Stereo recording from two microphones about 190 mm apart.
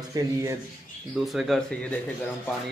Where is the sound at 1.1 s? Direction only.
Centre (ahead or behind).